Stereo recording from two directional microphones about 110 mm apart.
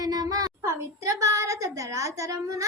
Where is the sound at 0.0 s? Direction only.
40° right (ahead or behind).